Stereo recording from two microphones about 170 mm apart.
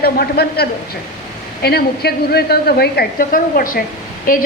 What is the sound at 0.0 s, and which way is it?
A woman's voice, 65° left (ahead or behind).